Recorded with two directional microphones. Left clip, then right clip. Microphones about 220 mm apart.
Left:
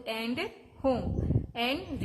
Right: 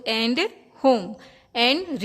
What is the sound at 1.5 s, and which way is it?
Speech, 50° right (ahead or behind).